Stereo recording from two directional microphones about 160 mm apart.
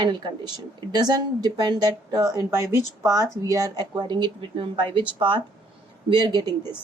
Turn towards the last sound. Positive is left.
turn(degrees=-25)  # may be behind; listen again after turning